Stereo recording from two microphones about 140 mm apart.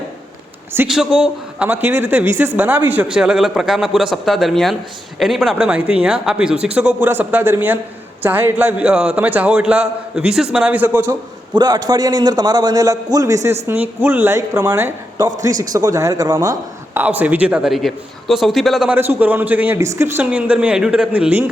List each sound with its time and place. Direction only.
0.9 s a man's voice: 5° right (ahead or behind)
11.5 s a man's voice: 30° right (ahead or behind)
17.0 s speech: 10° right (ahead or behind)
18.9 s a man's voice: 15° right (ahead or behind)